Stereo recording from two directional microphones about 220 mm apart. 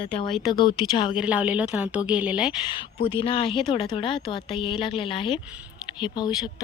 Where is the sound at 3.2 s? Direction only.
25° left (ahead or behind).